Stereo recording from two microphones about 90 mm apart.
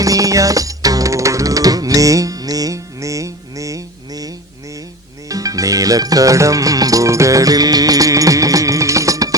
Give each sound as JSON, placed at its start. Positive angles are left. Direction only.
{"t": 0.0, "sound": "music", "side_deg": -40}